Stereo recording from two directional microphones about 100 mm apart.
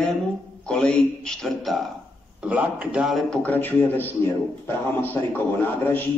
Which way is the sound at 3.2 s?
15° left (ahead or behind).